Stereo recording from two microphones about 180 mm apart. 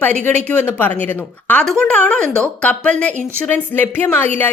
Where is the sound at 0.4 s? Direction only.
10° left (ahead or behind).